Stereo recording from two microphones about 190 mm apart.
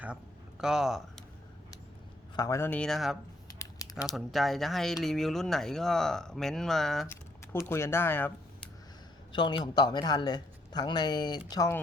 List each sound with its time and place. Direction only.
0.6 s speech: 5° right (ahead or behind)
2.3 s speech: 15° left (ahead or behind); by 3.2 s centre (ahead or behind)
3.6 s crumpling: 15° left (ahead or behind)
4.1 s speech: centre (ahead or behind)
7.7 s speech: 15° left (ahead or behind)
9.3 s speech: 25° left (ahead or behind)